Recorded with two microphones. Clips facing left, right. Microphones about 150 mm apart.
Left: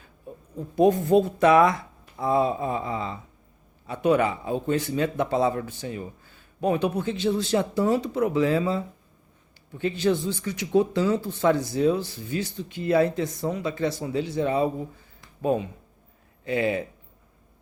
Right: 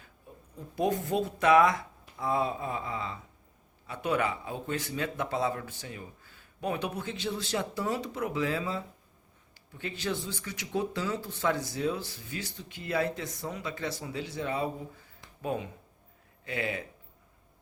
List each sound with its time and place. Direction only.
0.8 s speech: 30° left (ahead or behind)